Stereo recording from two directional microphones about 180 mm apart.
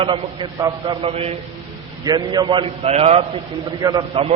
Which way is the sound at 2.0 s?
25° right (ahead or behind).